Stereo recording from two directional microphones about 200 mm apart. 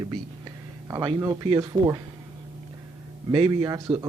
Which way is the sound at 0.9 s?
15° right (ahead or behind).